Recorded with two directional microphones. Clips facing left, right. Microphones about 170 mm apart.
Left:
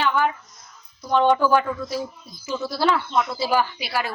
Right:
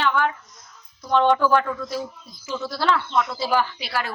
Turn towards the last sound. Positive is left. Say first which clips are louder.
# left 1 dB
turn(degrees=10)  # may be behind; listen again after turning